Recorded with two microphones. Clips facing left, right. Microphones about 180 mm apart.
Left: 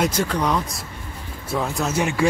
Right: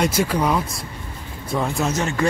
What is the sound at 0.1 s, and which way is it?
A man's voice, 10° right (ahead or behind).